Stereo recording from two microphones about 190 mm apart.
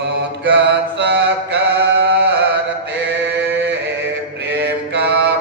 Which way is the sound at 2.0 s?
60° right (ahead or behind).